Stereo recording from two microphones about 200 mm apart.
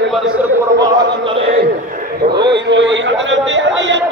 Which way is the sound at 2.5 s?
65° right (ahead or behind).